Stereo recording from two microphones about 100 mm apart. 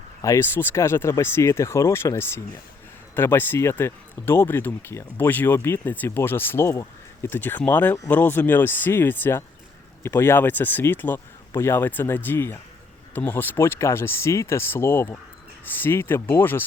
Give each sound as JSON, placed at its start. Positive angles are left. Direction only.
{"t": 0.2, "sound": "speech", "side_deg": 35}